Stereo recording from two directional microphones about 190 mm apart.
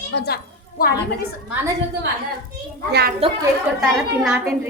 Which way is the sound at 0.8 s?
50° left (ahead or behind).